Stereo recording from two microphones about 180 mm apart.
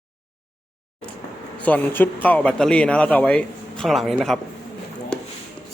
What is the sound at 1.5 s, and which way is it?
Speech, 10° left (ahead or behind).